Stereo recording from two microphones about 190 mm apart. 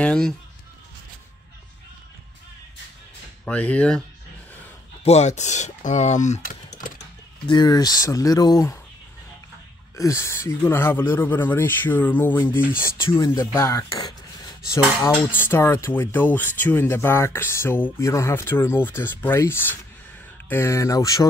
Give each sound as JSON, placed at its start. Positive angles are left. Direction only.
{"t": 0.0, "sound": "speech", "side_deg": 5}
{"t": 3.4, "sound": "speech", "side_deg": 10}
{"t": 5.0, "sound": "speech", "side_deg": 35}
{"t": 7.4, "sound": "speech", "side_deg": 20}
{"t": 9.9, "sound": "speech", "side_deg": 15}
{"t": 15.3, "sound": "speech", "side_deg": 10}